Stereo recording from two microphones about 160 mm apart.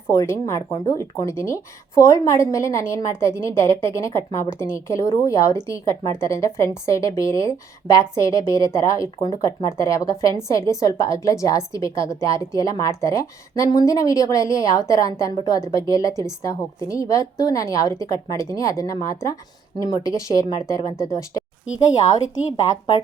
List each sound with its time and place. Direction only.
0.1 s a woman's voice: 20° left (ahead or behind)